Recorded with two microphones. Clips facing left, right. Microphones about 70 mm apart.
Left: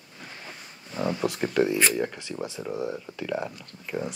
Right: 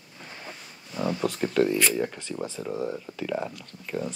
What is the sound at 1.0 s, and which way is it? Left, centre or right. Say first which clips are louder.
Speech: even; centre.